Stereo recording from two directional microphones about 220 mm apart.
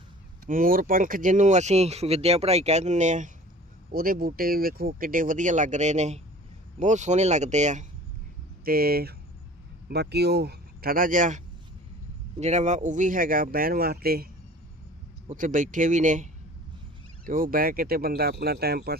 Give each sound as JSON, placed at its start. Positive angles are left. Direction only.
{"t": 0.4, "sound": "speech", "side_deg": -40}
{"t": 8.6, "sound": "speech", "side_deg": -45}
{"t": 15.3, "sound": "speech", "side_deg": -35}